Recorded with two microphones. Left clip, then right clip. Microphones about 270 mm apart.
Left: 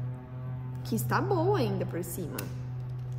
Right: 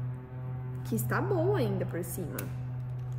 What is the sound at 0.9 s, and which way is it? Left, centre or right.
Speech, centre.